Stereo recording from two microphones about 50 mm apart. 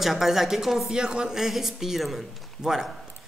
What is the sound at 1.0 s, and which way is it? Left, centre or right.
A man's voice, centre.